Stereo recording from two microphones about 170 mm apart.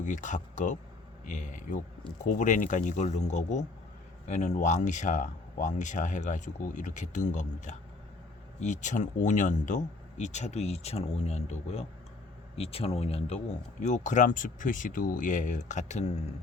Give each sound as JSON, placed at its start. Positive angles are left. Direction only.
{"t": 0.0, "sound": "speech", "side_deg": 50}